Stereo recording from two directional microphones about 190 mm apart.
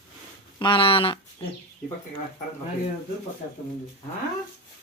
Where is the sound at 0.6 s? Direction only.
25° left (ahead or behind).